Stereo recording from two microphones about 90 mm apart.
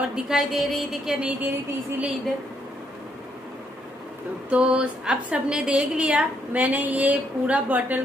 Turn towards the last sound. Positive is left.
turn(degrees=-15)  # may be behind; listen again after turning